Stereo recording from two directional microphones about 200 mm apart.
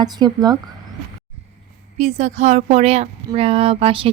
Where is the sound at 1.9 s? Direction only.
35° right (ahead or behind).